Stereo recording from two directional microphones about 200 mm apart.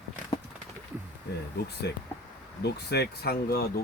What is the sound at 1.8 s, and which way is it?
Speech, 55° left (ahead or behind).